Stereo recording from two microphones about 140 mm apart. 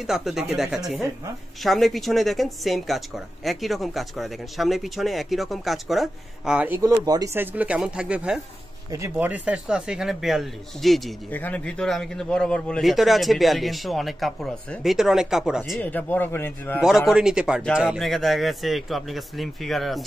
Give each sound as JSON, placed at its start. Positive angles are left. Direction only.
{"t": 0.0, "sound": "a man's voice", "side_deg": -5}
{"t": 6.8, "sound": "speech", "side_deg": -25}
{"t": 7.3, "sound": "a man's voice", "side_deg": -10}
{"t": 11.2, "sound": "a man's voice", "side_deg": 10}
{"t": 15.8, "sound": "speech", "side_deg": 10}
{"t": 16.8, "sound": "a man's voice", "side_deg": -5}